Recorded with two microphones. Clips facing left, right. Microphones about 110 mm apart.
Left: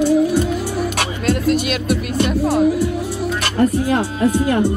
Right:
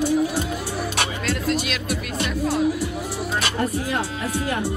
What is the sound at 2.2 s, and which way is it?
Music, 45° left (ahead or behind).